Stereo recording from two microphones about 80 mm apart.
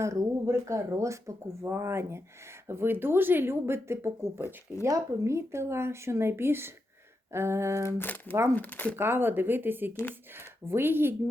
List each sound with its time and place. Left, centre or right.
0.0 s speech: right
7.9 s speech: left
9.0 s speech: right